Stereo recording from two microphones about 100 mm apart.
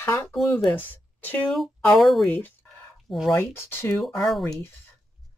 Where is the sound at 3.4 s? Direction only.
20° left (ahead or behind).